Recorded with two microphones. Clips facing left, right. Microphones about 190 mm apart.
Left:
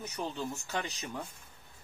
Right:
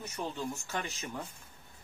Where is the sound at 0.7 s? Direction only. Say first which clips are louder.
Left 1 dB; 15° left (ahead or behind).